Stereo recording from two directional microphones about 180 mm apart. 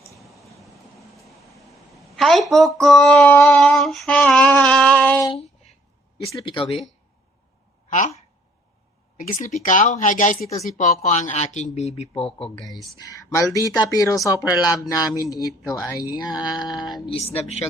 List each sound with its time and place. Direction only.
0.2 s vehicle: centre (ahead or behind)
6.3 s speech: 25° left (ahead or behind)
7.9 s a sound: 40° left (ahead or behind)
9.1 s speech: 45° left (ahead or behind)
12.5 s speech: centre (ahead or behind)
13.0 s speech: 20° left (ahead or behind)
17.1 s speech: 35° left (ahead or behind)